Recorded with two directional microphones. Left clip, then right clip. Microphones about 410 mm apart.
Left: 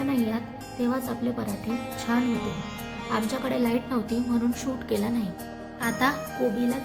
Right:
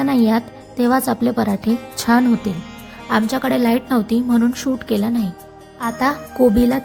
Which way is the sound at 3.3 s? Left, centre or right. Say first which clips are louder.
Right 8 dB; centre.